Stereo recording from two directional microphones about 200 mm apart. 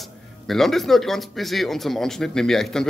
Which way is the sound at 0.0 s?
Centre (ahead or behind).